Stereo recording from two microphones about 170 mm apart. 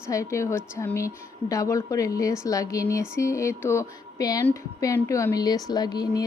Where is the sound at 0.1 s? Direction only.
15° left (ahead or behind).